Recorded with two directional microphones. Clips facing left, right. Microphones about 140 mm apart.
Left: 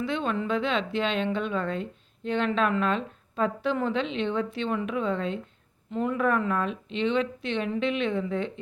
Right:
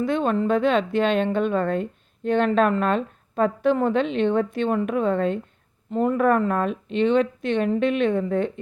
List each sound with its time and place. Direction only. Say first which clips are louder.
0.0 s speech: right 7 dB; 45° right (ahead or behind)